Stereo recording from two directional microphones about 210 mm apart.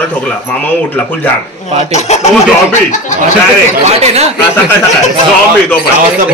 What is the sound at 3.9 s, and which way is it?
Speech, 30° right (ahead or behind).